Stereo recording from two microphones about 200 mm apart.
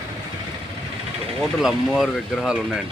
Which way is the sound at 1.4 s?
Centre (ahead or behind).